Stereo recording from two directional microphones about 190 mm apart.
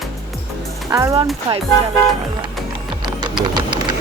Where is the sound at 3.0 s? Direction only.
25° right (ahead or behind).